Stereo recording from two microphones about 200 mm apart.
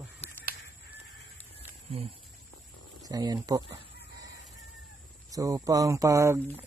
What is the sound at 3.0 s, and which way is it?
Speech, 20° right (ahead or behind).